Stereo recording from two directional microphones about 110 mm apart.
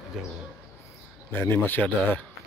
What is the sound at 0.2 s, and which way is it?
Speech, 5° right (ahead or behind).